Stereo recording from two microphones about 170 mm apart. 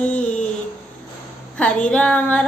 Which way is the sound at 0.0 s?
10° left (ahead or behind).